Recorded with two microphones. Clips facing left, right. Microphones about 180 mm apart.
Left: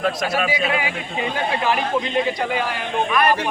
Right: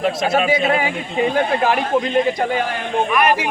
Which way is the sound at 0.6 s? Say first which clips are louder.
Right 4 dB; 40° right (ahead or behind).